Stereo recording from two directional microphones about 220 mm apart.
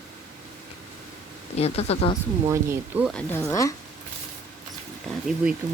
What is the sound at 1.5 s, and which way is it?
Speech, 30° left (ahead or behind).